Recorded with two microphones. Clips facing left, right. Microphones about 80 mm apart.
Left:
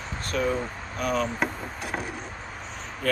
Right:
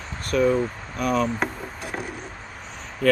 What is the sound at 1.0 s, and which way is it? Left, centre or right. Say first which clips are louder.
Speech: right 4 dB; right.